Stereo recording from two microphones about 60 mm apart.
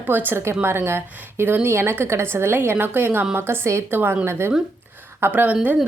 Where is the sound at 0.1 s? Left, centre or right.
Right.